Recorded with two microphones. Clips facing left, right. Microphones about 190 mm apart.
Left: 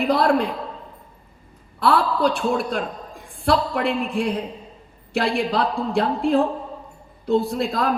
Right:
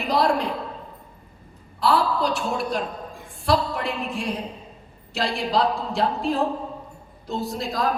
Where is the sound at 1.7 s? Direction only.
55° left (ahead or behind).